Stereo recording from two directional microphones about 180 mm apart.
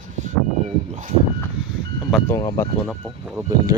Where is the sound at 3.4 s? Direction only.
20° right (ahead or behind).